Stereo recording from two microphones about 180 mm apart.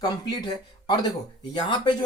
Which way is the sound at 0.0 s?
25° left (ahead or behind).